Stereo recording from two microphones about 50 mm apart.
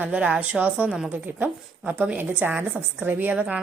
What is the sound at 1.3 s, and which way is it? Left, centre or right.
Speech, right.